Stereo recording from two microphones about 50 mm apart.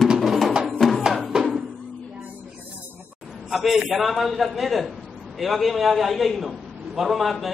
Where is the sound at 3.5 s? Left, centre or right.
Centre.